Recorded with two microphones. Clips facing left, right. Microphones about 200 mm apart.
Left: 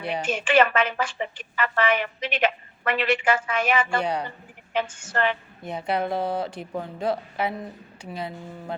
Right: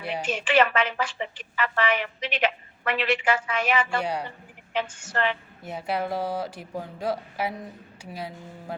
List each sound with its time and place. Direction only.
0.2 s speech: 50° left (ahead or behind)
4.0 s speech: 10° right (ahead or behind)
4.7 s speech: 50° left (ahead or behind)
5.6 s speech: 5° right (ahead or behind)
6.2 s speech: 60° left (ahead or behind)
6.5 s speech: 5° right (ahead or behind)